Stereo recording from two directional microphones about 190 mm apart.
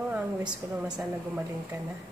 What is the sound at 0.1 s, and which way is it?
A woman's voice, 5° right (ahead or behind).